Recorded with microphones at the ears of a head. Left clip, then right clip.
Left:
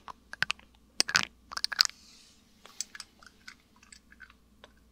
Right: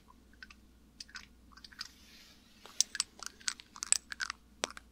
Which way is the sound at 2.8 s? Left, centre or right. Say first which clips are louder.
Right 8 dB; right.